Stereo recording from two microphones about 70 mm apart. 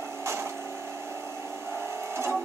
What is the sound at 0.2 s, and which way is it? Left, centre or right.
Vehicle, right.